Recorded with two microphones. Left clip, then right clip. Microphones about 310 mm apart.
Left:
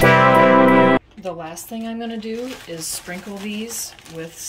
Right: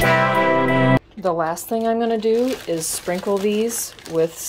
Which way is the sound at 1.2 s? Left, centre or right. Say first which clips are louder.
Right 9 dB; centre.